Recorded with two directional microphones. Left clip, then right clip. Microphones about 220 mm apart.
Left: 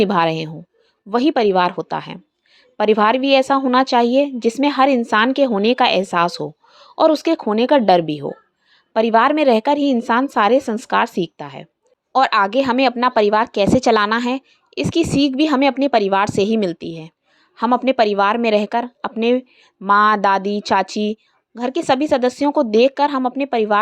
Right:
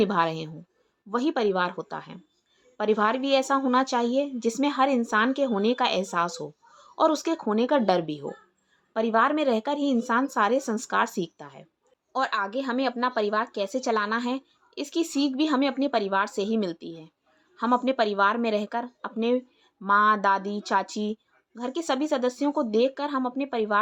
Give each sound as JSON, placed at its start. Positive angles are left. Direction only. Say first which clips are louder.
{"t": 0.0, "sound": "a woman's voice", "louder": "left 8 dB", "side_deg": 25}